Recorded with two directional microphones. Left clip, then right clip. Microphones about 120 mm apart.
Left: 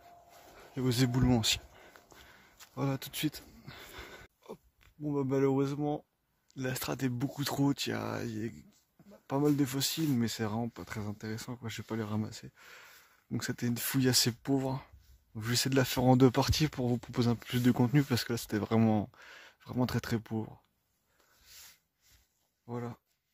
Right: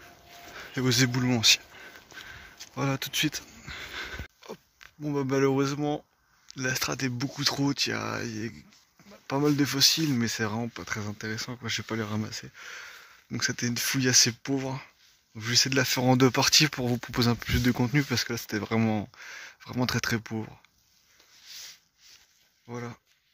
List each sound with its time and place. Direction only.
0.8 s speech: 25° left (ahead or behind)
1.1 s speech: 40° left (ahead or behind)
1.8 s a sound: 15° left (ahead or behind)
6.5 s speech: 20° left (ahead or behind)
9.6 s speech: 15° left (ahead or behind)
13.3 s speech: 30° left (ahead or behind)
15.3 s speech: 55° left (ahead or behind)
15.7 s speech: 40° left (ahead or behind)
16.0 s speech: 30° left (ahead or behind)
21.5 s a sound: 50° left (ahead or behind)